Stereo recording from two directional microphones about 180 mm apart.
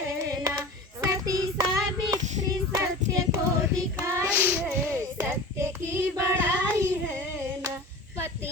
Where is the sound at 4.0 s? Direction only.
10° right (ahead or behind).